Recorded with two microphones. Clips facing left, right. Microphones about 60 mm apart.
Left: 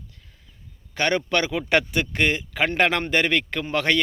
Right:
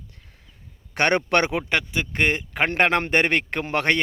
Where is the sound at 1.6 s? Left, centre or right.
Centre.